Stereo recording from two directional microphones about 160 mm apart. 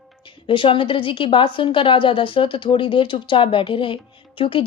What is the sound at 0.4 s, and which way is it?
Speech, 30° left (ahead or behind).